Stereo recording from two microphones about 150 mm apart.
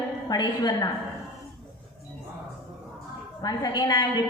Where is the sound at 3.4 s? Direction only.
30° left (ahead or behind).